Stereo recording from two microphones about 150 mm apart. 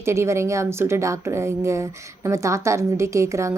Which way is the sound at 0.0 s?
20° right (ahead or behind).